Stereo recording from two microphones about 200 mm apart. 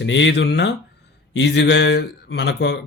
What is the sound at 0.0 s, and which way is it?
Speech, 65° left (ahead or behind).